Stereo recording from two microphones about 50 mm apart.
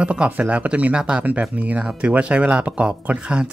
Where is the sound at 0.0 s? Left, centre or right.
Right.